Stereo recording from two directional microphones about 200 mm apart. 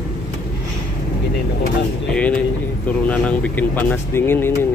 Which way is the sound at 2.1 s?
5° left (ahead or behind).